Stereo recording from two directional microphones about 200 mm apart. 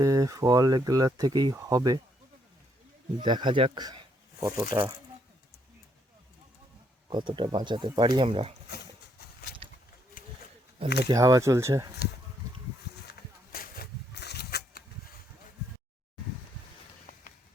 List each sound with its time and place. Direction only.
0.0 s speech: 15° right (ahead or behind)
3.2 s speech: 25° right (ahead or behind)
7.1 s speech: 25° right (ahead or behind)
10.2 s wild animals: 45° left (ahead or behind)
10.8 s speech: 55° left (ahead or behind)
11.1 s speech: 15° right (ahead or behind)
13.1 s a sound: 45° left (ahead or behind)